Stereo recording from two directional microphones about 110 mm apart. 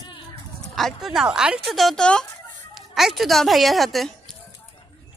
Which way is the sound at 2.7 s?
5° right (ahead or behind).